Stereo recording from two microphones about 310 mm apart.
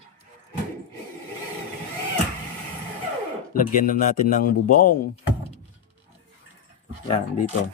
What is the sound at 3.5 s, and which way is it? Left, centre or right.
A man's voice, left.